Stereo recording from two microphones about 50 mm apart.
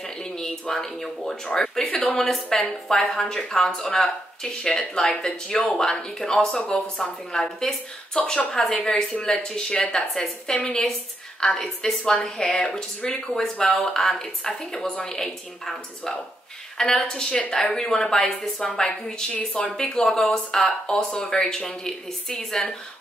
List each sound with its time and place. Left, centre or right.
0.0 s speech: centre
2.5 s a woman's voice: centre
19.3 s speech: left
19.8 s speech: centre